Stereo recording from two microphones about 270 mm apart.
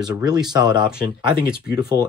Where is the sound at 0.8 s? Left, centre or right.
Centre.